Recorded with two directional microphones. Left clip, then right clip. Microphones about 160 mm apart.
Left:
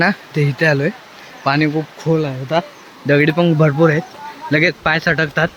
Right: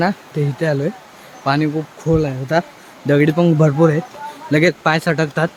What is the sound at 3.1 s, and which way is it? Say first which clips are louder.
Speech: left 1 dB; 15° right (ahead or behind).